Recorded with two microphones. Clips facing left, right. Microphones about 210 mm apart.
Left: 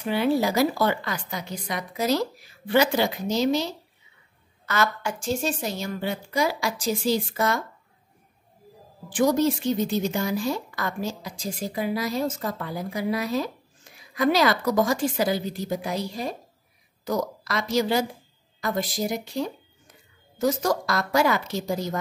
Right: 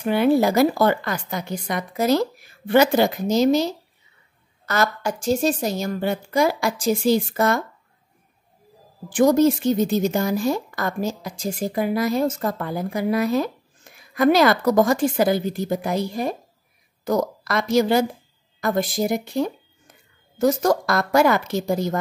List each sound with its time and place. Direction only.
0.0 s speech: 55° right (ahead or behind)
9.1 s speech: 50° right (ahead or behind)